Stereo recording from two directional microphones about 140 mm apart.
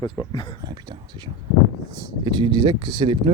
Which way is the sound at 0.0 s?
30° left (ahead or behind).